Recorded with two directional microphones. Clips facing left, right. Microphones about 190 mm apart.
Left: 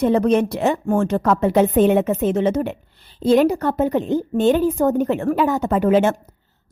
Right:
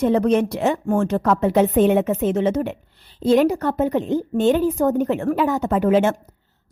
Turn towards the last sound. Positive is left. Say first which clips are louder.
# left 1 dB
turn(degrees=40)  # may be behind; listen again after turning